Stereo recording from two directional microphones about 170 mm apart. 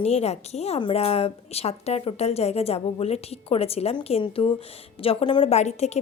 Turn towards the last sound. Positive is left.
turn(degrees=40)  # may be behind; listen again after turning